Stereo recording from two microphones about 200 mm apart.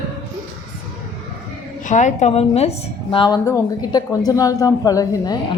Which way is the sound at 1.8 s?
40° left (ahead or behind).